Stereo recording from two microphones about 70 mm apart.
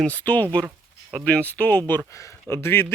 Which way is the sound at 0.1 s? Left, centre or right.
Left.